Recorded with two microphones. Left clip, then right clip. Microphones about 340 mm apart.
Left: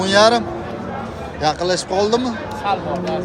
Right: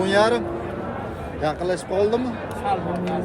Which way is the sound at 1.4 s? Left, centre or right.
Centre.